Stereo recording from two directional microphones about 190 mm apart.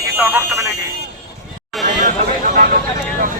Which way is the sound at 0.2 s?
15° right (ahead or behind).